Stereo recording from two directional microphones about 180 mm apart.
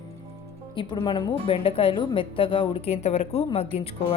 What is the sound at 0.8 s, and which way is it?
Speech, 25° left (ahead or behind).